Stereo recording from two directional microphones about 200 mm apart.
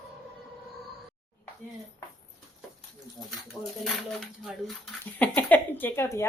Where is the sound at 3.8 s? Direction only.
Centre (ahead or behind).